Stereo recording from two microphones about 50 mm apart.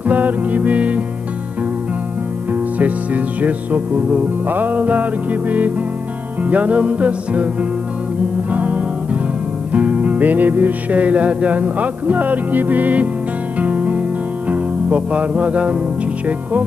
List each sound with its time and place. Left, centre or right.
0.0 s music: right
2.5 s music: right
8.5 s music: right